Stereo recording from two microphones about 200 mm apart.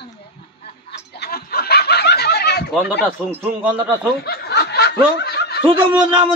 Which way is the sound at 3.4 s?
5° right (ahead or behind).